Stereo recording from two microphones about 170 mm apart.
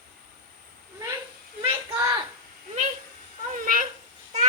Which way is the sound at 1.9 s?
25° right (ahead or behind).